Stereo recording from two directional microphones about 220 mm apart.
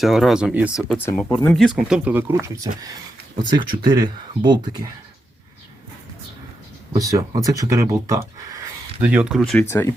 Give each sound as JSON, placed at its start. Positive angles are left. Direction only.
{"t": 0.0, "sound": "speech", "side_deg": 0}
{"t": 6.9, "sound": "speech", "side_deg": -15}